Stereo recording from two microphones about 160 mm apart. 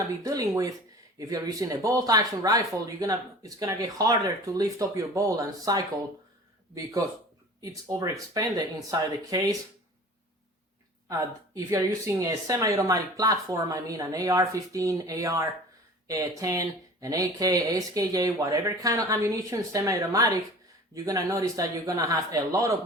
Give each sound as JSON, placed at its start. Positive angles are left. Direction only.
{"t": 0.2, "sound": "speech", "side_deg": -20}
{"t": 7.6, "sound": "speech", "side_deg": -20}
{"t": 11.1, "sound": "speech", "side_deg": -20}